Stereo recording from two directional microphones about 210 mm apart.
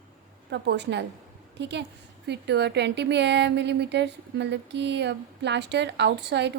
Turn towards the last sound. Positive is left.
turn(degrees=-55)  # may be behind; listen again after turning